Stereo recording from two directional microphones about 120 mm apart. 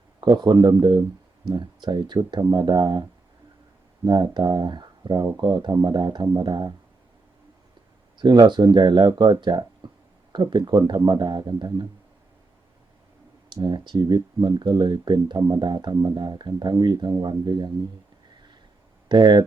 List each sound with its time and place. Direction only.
0.2 s speech: 40° right (ahead or behind)
4.0 s speech: 35° right (ahead or behind)
8.2 s speech: 35° right (ahead or behind)
13.5 s speech: 35° right (ahead or behind)
19.0 s speech: 35° right (ahead or behind)